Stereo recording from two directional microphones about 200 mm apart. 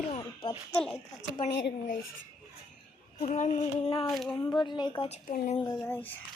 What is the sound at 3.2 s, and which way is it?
Speech, 35° left (ahead or behind).